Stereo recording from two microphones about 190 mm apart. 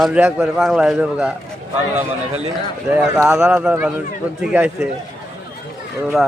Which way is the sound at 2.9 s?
5° right (ahead or behind).